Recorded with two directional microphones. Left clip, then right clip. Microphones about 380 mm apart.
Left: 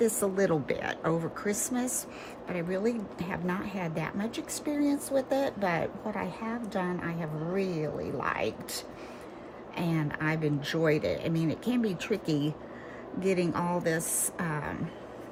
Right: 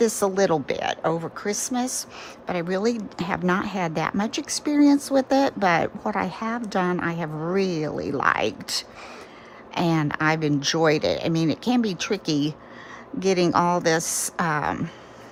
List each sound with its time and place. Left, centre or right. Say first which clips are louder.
0.0 s a woman's voice: right 6 dB; centre
9.7 s a woman's voice: right 10 dB; centre